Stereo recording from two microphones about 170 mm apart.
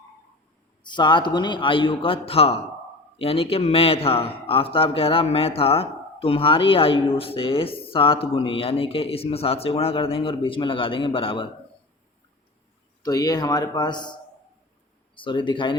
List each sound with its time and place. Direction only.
0.9 s a man's voice: 25° left (ahead or behind)
13.0 s a man's voice: 20° left (ahead or behind)